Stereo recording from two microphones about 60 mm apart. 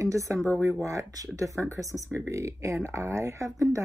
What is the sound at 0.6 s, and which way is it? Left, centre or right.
Speech, centre.